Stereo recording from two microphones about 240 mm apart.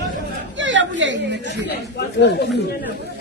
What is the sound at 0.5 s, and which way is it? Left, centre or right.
Speech, right.